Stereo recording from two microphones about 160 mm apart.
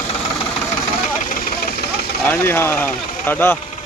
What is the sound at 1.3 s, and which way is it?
Vehicle, 70° left (ahead or behind).